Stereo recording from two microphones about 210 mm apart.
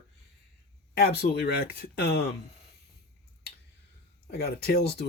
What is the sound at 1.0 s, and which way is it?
Speech, 50° left (ahead or behind).